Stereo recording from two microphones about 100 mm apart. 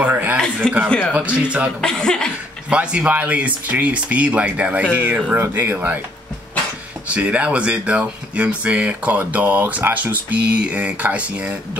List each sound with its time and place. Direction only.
0.0 s a sound: 15° right (ahead or behind)
0.8 s speech: 10° left (ahead or behind)
1.4 s speech: 10° right (ahead or behind)
1.8 s speech: 5° left (ahead or behind)
2.7 s speech: 10° right (ahead or behind)
7.2 s speech: 15° right (ahead or behind)